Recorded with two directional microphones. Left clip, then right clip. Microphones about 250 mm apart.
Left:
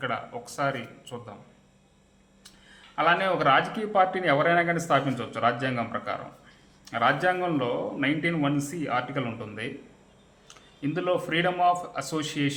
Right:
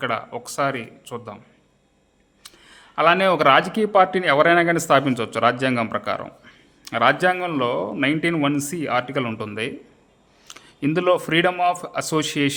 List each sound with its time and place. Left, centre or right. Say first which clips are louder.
0.0 s speech: right 6 dB; right
2.4 s speech: right 6 dB; right